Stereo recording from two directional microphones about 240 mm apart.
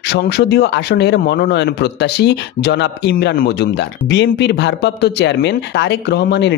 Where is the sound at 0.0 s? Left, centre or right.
Left.